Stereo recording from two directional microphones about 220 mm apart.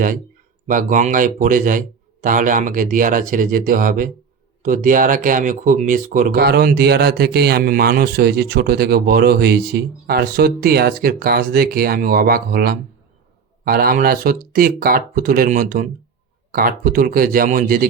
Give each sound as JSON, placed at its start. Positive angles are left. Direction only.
{"t": 0.7, "sound": "speech", "side_deg": -35}